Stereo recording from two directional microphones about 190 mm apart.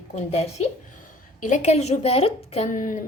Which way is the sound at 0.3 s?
35° left (ahead or behind).